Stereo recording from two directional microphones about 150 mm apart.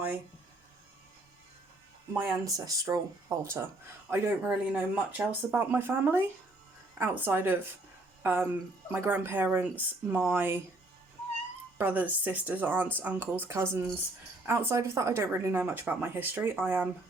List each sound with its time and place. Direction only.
2.1 s speech: 20° right (ahead or behind)
11.8 s speech: 10° right (ahead or behind)